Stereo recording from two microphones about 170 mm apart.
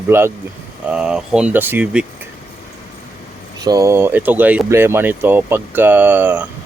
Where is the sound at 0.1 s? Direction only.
15° right (ahead or behind).